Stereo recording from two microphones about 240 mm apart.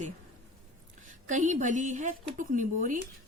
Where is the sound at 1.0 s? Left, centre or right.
Right.